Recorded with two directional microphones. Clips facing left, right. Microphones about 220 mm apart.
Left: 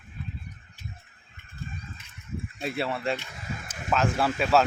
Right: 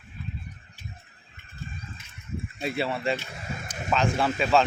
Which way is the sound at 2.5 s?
Centre (ahead or behind).